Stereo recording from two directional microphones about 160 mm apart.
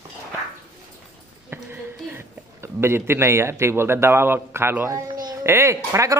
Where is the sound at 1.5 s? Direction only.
15° right (ahead or behind).